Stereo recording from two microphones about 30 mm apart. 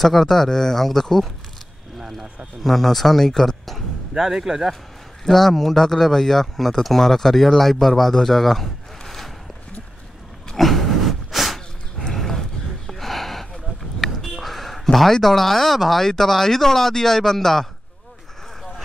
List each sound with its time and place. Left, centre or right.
0.0 s speech: centre
2.6 s speech: centre
4.2 s speech: centre
5.2 s speech: centre
10.6 s a sound: centre
15.2 s speech: centre